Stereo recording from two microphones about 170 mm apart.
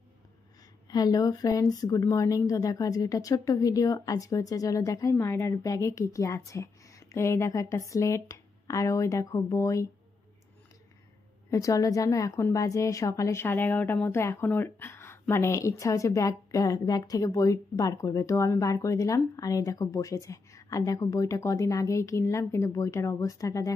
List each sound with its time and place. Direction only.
0.8 s a woman's voice: 20° left (ahead or behind)
11.5 s a woman's voice: 20° left (ahead or behind)